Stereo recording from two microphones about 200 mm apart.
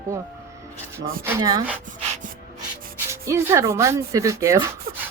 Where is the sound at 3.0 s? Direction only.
15° right (ahead or behind).